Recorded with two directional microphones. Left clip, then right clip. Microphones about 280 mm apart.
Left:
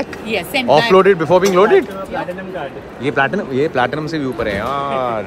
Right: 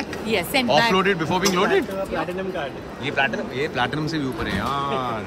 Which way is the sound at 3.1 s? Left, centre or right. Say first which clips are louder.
Left 6 dB; left.